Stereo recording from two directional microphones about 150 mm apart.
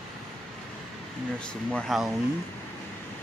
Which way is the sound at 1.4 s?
5° left (ahead or behind).